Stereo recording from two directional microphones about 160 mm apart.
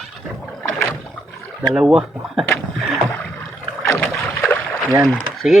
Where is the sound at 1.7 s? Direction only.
5° right (ahead or behind).